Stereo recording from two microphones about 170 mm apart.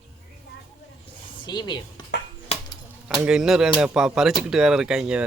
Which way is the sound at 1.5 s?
25° left (ahead or behind).